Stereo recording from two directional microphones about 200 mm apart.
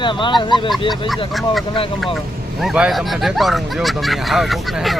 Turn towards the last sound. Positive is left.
turn(degrees=0)  # may be behind; listen again after turning